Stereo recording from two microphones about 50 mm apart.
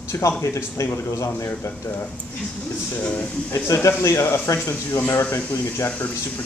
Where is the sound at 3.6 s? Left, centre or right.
Left.